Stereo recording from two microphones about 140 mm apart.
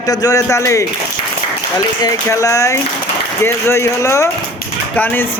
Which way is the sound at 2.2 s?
20° left (ahead or behind).